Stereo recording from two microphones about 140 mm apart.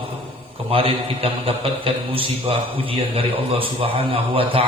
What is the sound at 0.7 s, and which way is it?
A man's voice, 40° right (ahead or behind).